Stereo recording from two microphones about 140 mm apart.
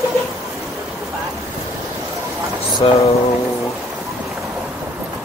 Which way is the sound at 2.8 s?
40° left (ahead or behind).